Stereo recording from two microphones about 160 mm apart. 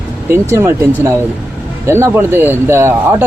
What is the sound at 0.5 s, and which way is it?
Speech, 20° right (ahead or behind).